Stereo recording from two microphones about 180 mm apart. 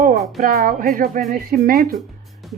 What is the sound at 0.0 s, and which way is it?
A woman's voice, 50° right (ahead or behind).